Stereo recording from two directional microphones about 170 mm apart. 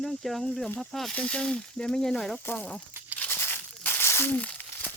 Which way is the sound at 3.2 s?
10° left (ahead or behind).